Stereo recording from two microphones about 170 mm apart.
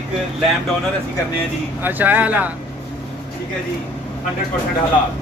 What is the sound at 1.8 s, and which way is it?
Speech, 10° right (ahead or behind).